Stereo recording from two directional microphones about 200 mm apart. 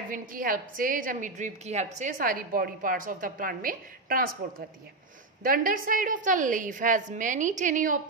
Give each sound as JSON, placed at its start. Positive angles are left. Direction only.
{"t": 0.1, "sound": "a woman's voice", "side_deg": -45}